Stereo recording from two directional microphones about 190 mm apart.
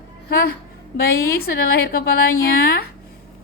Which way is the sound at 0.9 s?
55° left (ahead or behind).